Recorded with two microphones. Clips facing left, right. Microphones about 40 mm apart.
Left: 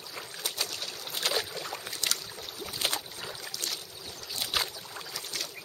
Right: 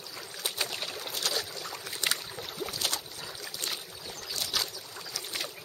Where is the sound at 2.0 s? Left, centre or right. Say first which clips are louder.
Right 4 dB; right.